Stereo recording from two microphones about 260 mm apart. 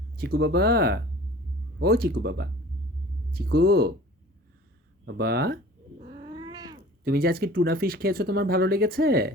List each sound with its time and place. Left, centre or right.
0.2 s speech: right
5.0 s speech: right
6.0 s cat: centre
7.0 s speech: right